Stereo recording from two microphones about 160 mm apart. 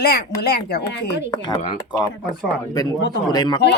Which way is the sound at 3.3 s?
25° left (ahead or behind).